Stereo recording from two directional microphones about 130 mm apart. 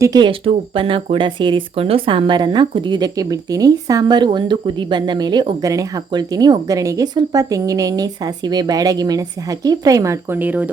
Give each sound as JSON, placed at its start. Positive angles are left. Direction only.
{"t": 0.0, "sound": "speech", "side_deg": -30}
{"t": 0.3, "sound": "speech", "side_deg": -45}